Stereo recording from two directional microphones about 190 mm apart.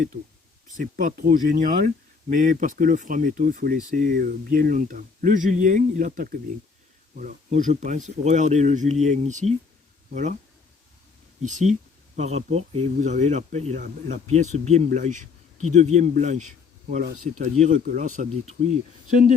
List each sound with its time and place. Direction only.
0.8 s speech: 45° right (ahead or behind)
11.4 s speech: 40° right (ahead or behind)